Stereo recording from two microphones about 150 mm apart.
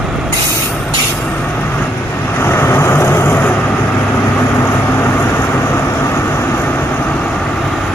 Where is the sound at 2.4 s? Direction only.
15° left (ahead or behind).